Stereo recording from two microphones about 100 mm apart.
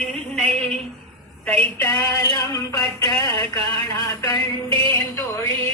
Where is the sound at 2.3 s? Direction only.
40° left (ahead or behind).